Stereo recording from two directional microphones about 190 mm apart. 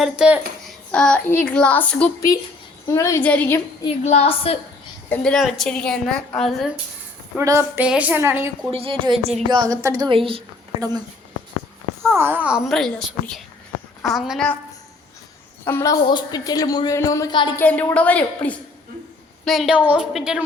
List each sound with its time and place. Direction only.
0.0 s a woman's voice: 5° right (ahead or behind)
4.0 s a woman's voice: 35° left (ahead or behind)
5.0 s speech: 5° left (ahead or behind)
7.3 s a woman's voice: 15° right (ahead or behind)
8.7 s a woman's voice: 30° right (ahead or behind)
12.1 s speech: 10° right (ahead or behind); by 14.6 s 5° left (ahead or behind)
15.6 s a woman's voice: 15° left (ahead or behind)
17.6 s a woman's voice: 10° left (ahead or behind)